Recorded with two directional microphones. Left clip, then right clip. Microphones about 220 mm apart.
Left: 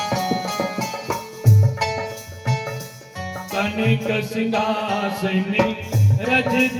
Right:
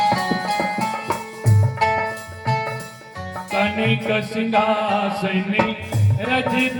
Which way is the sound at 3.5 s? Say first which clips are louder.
Right 3 dB; 15° right (ahead or behind).